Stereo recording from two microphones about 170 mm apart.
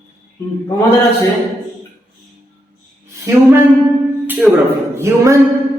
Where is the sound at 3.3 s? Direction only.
20° right (ahead or behind).